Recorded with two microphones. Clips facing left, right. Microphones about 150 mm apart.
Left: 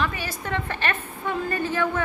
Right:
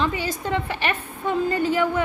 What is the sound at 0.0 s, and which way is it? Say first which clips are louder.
A woman's voice: right 4 dB; 20° right (ahead or behind).